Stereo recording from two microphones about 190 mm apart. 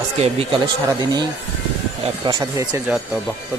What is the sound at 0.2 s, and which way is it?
Speech, 35° right (ahead or behind).